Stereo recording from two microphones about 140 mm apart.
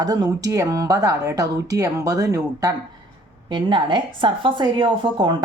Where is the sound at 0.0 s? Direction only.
30° right (ahead or behind).